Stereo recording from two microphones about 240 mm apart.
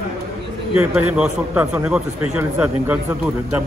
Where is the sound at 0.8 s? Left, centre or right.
Centre.